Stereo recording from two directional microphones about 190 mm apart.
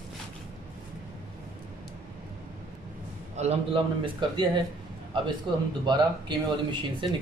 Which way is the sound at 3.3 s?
35° right (ahead or behind).